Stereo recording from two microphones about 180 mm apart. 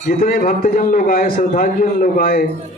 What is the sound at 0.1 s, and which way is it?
A man's voice, 50° left (ahead or behind).